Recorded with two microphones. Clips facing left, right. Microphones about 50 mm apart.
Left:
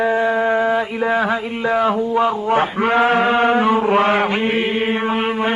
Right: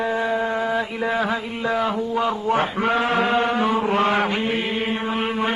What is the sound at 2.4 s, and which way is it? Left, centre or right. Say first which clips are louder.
Mantra: left 4 dB; left.